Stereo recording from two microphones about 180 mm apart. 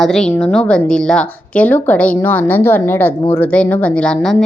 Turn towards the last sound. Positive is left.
turn(degrees=5)  # may be behind; listen again after turning